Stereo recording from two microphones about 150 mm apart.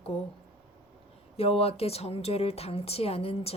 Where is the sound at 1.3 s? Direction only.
40° left (ahead or behind).